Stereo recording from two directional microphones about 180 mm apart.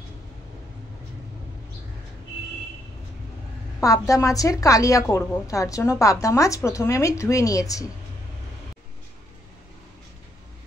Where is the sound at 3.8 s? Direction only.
20° left (ahead or behind).